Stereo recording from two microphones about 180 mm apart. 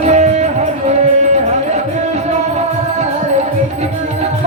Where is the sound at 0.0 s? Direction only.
35° right (ahead or behind).